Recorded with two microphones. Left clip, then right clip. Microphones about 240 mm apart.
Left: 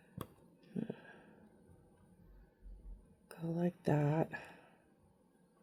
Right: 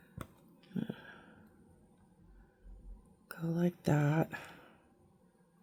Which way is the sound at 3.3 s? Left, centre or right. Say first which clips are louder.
Right 3 dB; right.